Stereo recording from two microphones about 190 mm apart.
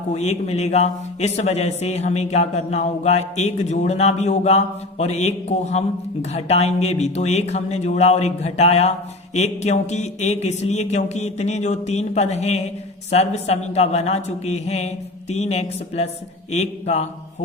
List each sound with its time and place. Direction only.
0.1 s a man's voice: 35° left (ahead or behind)